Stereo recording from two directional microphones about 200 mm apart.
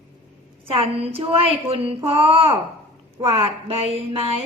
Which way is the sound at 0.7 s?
25° right (ahead or behind).